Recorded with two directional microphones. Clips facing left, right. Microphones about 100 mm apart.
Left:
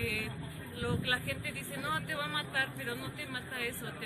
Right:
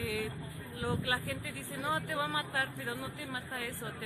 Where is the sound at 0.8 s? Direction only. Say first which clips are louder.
Right 1 dB; 30° right (ahead or behind).